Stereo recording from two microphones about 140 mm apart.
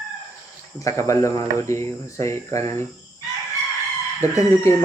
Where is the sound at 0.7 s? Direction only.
20° left (ahead or behind).